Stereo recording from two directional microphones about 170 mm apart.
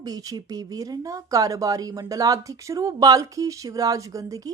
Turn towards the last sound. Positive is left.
turn(degrees=-20)  # may be behind; listen again after turning